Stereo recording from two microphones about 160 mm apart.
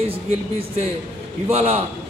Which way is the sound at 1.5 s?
40° right (ahead or behind).